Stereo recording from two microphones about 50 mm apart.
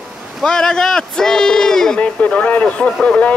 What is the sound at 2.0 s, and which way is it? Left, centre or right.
Speech, left.